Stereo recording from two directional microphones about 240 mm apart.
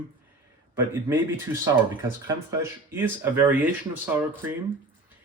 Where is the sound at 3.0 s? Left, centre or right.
Centre.